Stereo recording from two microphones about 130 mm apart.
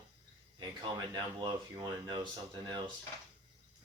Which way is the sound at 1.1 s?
30° right (ahead or behind).